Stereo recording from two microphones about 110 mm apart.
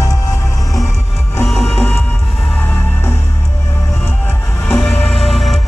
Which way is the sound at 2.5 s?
15° left (ahead or behind).